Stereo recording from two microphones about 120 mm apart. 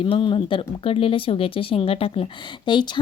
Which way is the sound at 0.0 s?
45° left (ahead or behind).